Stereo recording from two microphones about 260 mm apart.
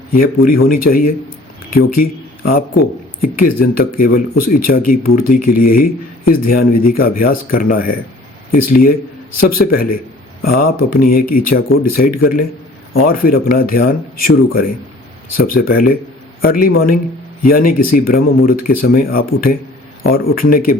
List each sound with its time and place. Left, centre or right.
0.1 s a man's voice: left
9.4 s speech: left